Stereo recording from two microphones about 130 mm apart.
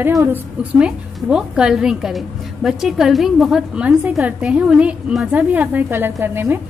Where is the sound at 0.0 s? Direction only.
20° right (ahead or behind).